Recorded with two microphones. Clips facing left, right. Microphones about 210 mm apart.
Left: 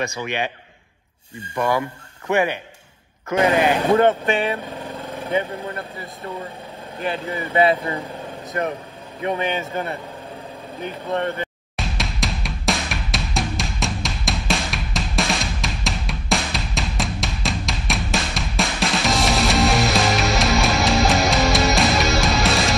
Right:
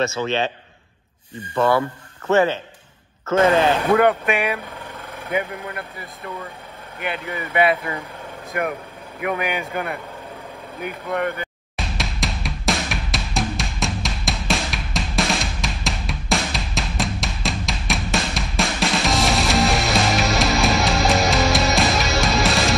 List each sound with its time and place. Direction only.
0.0 s speech: 15° left (ahead or behind)
3.9 s speech: 30° left (ahead or behind)
11.7 s music: centre (ahead or behind)